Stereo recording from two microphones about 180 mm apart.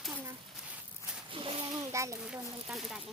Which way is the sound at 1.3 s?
30° right (ahead or behind).